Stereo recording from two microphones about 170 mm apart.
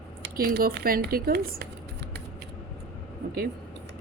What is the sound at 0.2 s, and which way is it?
Speech, 70° right (ahead or behind).